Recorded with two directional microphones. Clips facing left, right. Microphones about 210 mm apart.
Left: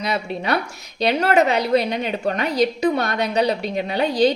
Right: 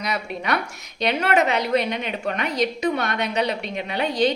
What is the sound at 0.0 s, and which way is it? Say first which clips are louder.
A woman's voice: left 3 dB; 30° left (ahead or behind).